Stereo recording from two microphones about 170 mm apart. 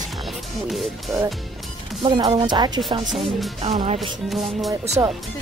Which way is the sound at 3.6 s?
40° right (ahead or behind).